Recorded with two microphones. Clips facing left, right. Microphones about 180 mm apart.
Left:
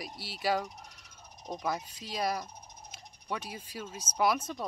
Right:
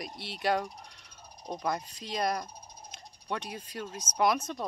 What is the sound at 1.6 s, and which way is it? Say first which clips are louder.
Speech: right 2 dB; 5° left (ahead or behind).